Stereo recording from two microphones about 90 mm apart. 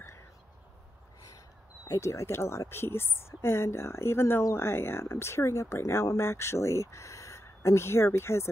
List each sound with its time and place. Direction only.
1.9 s a woman's voice: 35° left (ahead or behind)